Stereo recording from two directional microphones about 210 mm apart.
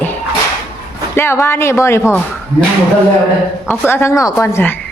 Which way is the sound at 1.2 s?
10° left (ahead or behind).